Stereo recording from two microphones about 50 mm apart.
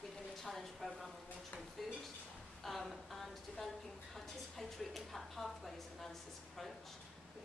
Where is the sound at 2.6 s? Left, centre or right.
Centre.